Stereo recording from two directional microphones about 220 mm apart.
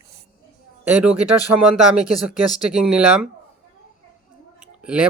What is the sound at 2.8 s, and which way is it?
Speech, 5° right (ahead or behind).